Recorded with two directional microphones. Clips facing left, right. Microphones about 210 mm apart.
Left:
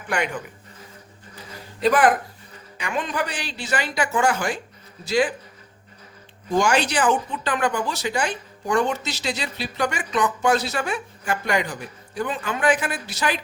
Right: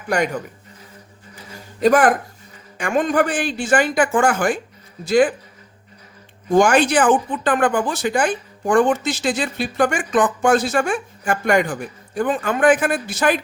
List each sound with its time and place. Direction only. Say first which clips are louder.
0.1 s speech: right 5 dB; 40° right (ahead or behind)
1.5 s a sound: right 5 dB; 45° right (ahead or behind)
2.7 s speech: right 9 dB; 50° right (ahead or behind)
6.5 s speech: right 6 dB; 55° right (ahead or behind)